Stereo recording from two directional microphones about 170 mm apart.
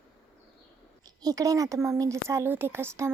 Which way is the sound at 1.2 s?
20° right (ahead or behind).